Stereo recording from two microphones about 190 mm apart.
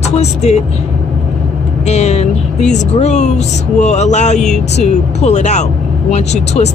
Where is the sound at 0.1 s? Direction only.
35° left (ahead or behind).